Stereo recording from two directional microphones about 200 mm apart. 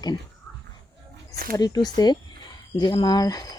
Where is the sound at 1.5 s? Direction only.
20° left (ahead or behind).